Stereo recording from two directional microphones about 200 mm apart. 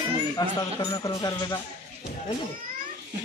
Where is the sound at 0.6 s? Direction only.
20° left (ahead or behind).